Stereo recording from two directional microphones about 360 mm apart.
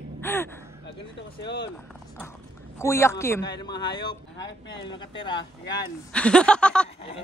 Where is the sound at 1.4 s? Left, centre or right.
Left.